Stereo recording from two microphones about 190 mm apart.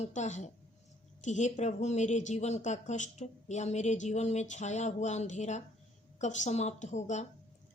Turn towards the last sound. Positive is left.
turn(degrees=40)  # may be behind; listen again after turning